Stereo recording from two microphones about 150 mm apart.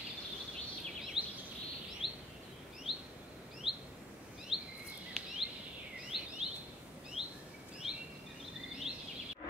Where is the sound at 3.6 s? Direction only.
Centre (ahead or behind).